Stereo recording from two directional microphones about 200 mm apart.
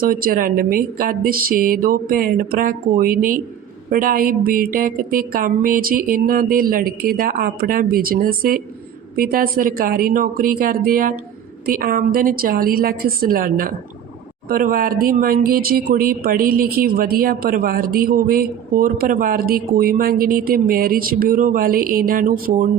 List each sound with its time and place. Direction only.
0.0 s speech: 45° right (ahead or behind)